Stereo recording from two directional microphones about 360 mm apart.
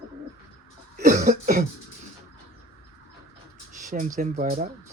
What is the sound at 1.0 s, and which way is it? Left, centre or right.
Cough, right.